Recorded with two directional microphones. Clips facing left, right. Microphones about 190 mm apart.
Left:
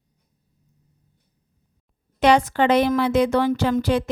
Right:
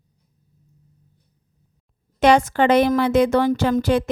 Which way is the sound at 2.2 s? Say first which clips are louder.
Right 2 dB; 45° right (ahead or behind).